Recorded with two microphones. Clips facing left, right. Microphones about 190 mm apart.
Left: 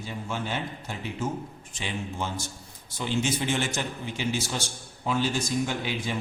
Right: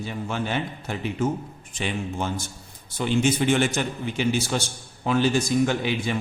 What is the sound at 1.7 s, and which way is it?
A man's voice, 55° right (ahead or behind).